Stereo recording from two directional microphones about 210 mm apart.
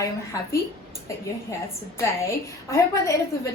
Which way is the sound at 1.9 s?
15° left (ahead or behind).